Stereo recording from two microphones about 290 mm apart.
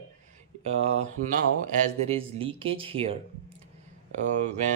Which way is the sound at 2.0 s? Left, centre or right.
Centre.